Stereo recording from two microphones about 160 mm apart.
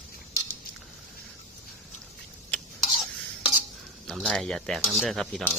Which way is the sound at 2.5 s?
10° left (ahead or behind).